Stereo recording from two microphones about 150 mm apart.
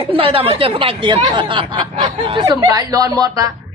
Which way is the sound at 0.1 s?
35° right (ahead or behind).